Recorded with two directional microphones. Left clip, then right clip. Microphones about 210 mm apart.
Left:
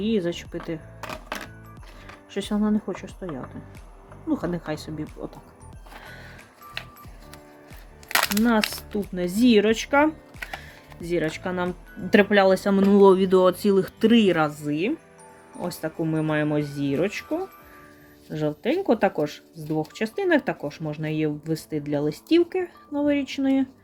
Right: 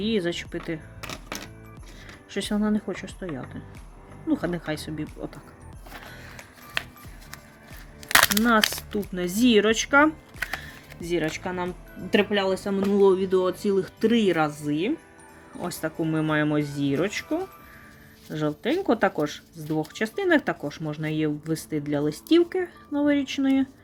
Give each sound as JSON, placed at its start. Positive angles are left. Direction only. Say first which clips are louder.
{"t": 0.0, "sound": "speech", "louder": "left 1 dB", "side_deg": -10}
{"t": 2.3, "sound": "speech", "louder": "left 1 dB", "side_deg": -10}
{"t": 8.0, "sound": "a sound", "louder": "right 4 dB", "side_deg": -15}
{"t": 8.9, "sound": "speech", "louder": "left 1 dB", "side_deg": 0}
{"t": 12.1, "sound": "speech", "louder": "left 5 dB", "side_deg": 25}